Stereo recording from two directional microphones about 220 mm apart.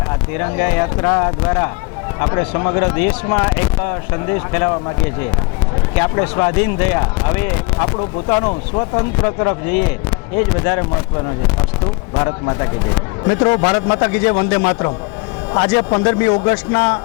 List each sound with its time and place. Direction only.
0.3 s a man's voice: 20° left (ahead or behind)
5.9 s a man's voice: 20° left (ahead or behind)
12.1 s a man's voice: 25° left (ahead or behind)